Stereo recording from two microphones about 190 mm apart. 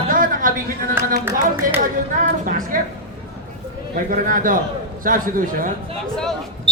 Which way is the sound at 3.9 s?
45° right (ahead or behind).